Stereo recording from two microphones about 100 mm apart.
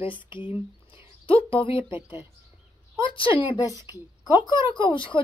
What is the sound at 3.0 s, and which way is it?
Speech, 60° left (ahead or behind).